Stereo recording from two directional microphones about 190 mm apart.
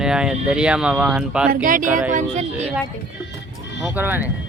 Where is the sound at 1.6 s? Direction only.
45° right (ahead or behind).